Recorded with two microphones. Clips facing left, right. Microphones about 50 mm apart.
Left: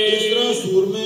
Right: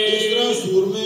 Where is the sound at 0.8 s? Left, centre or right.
Centre.